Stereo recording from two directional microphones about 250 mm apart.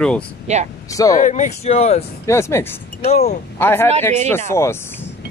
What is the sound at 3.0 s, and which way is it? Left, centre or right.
Speech, left.